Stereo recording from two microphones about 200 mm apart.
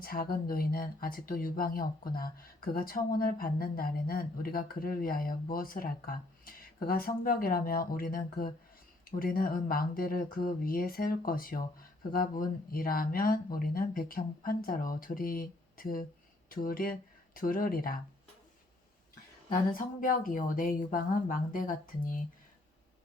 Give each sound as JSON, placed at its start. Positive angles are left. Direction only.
{"t": 0.0, "sound": "speech", "side_deg": 45}
{"t": 19.5, "sound": "speech", "side_deg": 45}